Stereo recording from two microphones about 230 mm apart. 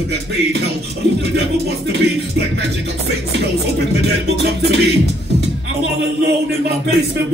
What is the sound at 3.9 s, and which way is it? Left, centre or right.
Music, right.